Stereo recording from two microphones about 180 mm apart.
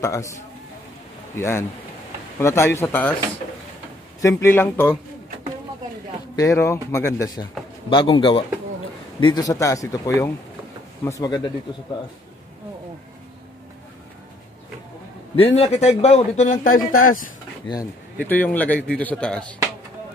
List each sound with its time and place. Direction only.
0.0 s speech: 15° left (ahead or behind)
1.3 s speech: 15° left (ahead or behind)
4.2 s speech: 15° left (ahead or behind)
6.3 s speech: 15° left (ahead or behind)
7.9 s speech: 25° left (ahead or behind)
15.3 s speech: 35° left (ahead or behind); by 17.3 s 50° left (ahead or behind)
18.2 s speech: 10° left (ahead or behind)